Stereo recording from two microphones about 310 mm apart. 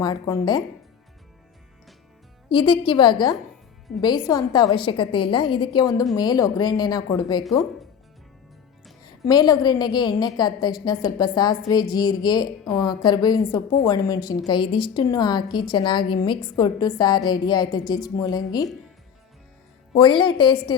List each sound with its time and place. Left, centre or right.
0.0 s a woman's voice: centre
2.5 s a woman's voice: centre
9.0 s a woman's voice: centre
20.0 s a woman's voice: centre